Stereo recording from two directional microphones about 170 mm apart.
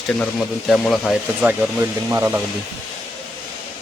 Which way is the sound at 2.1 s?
10° right (ahead or behind).